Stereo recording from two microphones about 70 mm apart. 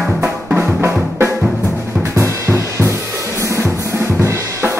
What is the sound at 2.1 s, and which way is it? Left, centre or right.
Drum kit, right.